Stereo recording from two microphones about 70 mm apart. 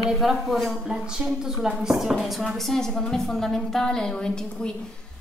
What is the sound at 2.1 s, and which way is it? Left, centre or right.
A woman's voice, centre.